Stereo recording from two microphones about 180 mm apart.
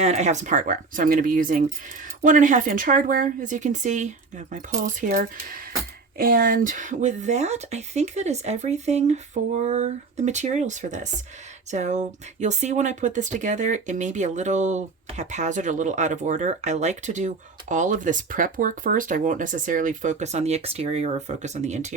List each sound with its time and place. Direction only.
0.0 s speech: 40° right (ahead or behind)